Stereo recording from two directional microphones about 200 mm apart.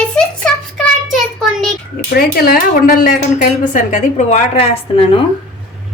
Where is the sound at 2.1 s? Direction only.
50° left (ahead or behind); by 5.2 s 30° left (ahead or behind).